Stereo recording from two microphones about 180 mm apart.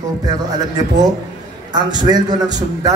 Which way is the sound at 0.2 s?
20° right (ahead or behind).